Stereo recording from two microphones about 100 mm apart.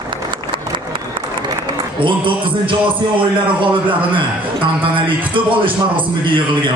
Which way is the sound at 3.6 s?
55° right (ahead or behind).